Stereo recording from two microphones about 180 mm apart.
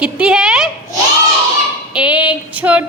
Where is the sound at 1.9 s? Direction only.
5° right (ahead or behind).